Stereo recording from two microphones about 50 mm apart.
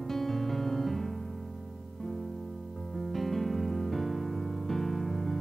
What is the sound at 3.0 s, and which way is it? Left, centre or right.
Music, centre.